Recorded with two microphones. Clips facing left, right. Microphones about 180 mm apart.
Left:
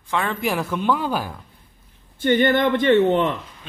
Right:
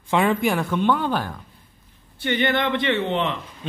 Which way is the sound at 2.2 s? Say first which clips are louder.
Left 5 dB; 45° left (ahead or behind).